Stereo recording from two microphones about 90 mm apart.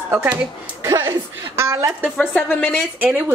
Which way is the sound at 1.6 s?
35° right (ahead or behind).